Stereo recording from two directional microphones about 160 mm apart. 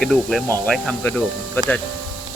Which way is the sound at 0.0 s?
Centre (ahead or behind).